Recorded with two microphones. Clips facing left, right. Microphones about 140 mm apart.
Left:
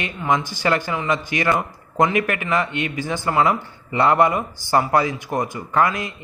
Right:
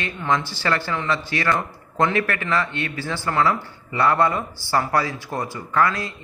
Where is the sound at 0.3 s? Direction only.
15° left (ahead or behind).